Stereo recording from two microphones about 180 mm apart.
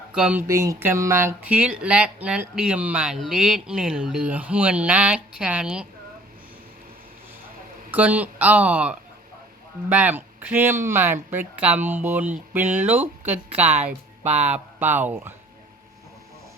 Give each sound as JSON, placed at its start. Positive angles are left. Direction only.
{"t": 0.1, "sound": "speech", "side_deg": -5}
{"t": 0.4, "sound": "speech", "side_deg": -20}
{"t": 7.9, "sound": "speech", "side_deg": -10}
{"t": 14.3, "sound": "speech", "side_deg": -40}
{"t": 14.5, "sound": "speech", "side_deg": -10}